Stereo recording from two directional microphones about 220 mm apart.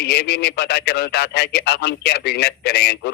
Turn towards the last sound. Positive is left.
turn(degrees=45)  # may be behind; listen again after turning